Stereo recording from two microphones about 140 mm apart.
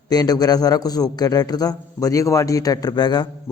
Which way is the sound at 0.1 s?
25° left (ahead or behind).